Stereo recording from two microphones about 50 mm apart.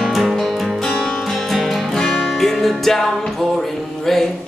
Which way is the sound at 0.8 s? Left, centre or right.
Centre.